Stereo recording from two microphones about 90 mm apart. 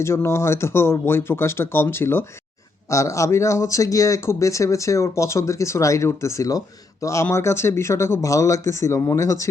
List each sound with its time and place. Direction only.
0.0 s speech: 30° left (ahead or behind)